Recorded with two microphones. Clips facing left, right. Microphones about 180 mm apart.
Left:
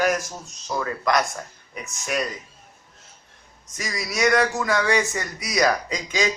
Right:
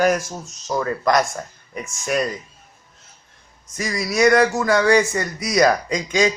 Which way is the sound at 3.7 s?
50° right (ahead or behind).